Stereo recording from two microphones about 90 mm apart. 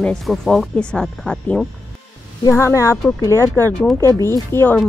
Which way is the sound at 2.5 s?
30° left (ahead or behind).